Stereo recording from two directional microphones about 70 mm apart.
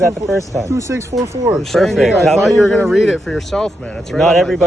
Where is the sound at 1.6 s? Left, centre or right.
Centre.